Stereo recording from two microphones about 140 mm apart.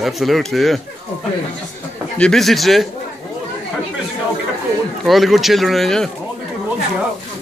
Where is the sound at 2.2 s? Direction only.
5° left (ahead or behind).